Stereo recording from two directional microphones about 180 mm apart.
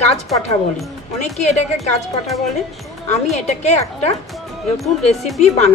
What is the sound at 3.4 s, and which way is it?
Speech, 40° left (ahead or behind).